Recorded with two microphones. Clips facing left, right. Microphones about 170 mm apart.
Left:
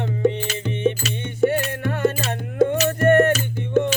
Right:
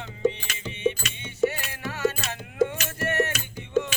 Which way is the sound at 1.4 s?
60° left (ahead or behind).